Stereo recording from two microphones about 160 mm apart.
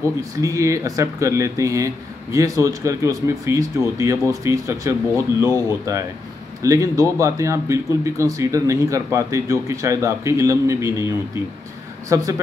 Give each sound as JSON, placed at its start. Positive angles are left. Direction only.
{"t": 0.0, "sound": "speech", "side_deg": -20}
{"t": 12.1, "sound": "speech", "side_deg": -20}